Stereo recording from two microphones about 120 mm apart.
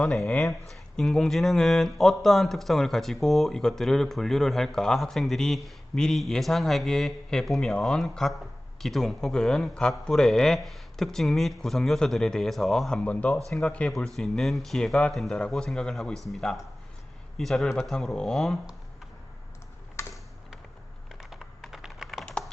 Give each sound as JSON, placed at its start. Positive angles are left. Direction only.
{"t": 0.0, "sound": "speech", "side_deg": 5}
{"t": 20.0, "sound": "typing", "side_deg": 25}
{"t": 21.2, "sound": "computer keyboard", "side_deg": 0}